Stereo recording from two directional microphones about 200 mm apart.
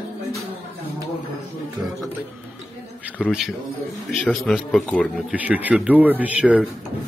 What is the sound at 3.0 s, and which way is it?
Speech, 5° right (ahead or behind).